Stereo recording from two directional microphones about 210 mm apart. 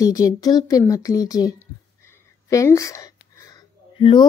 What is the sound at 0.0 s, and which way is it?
Speech, 15° left (ahead or behind).